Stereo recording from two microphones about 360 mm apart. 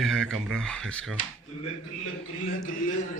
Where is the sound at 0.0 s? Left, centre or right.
Centre.